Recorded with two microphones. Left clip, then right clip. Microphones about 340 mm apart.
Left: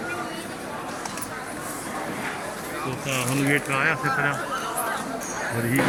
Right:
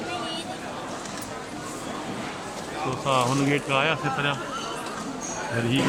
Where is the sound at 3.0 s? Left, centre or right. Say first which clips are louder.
Right 6 dB; right.